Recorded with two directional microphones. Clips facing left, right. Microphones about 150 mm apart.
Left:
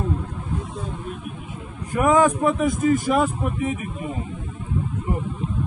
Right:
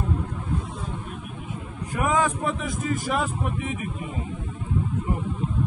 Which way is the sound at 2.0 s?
50° left (ahead or behind).